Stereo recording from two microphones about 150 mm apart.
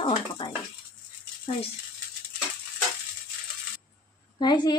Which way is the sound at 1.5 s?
45° left (ahead or behind).